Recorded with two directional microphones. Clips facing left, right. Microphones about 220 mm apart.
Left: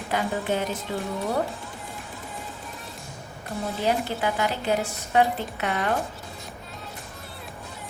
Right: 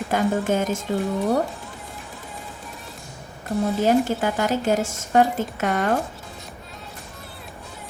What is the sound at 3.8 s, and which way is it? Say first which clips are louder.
A woman's voice: right 4 dB; 45° right (ahead or behind).